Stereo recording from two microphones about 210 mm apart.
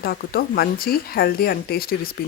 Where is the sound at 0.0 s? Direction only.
45° left (ahead or behind).